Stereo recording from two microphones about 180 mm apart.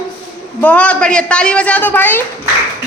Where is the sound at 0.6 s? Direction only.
10° left (ahead or behind).